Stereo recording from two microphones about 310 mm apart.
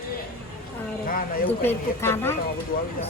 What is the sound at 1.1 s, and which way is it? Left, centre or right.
Speech, left.